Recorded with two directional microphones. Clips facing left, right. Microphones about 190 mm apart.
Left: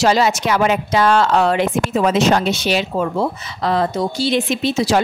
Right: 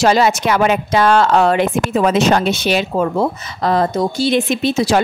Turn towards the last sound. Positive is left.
turn(degrees=-50)  # may be behind; listen again after turning